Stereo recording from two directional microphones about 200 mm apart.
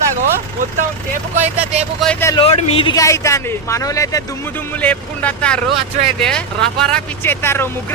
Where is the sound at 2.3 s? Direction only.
30° left (ahead or behind); by 5.6 s 5° left (ahead or behind).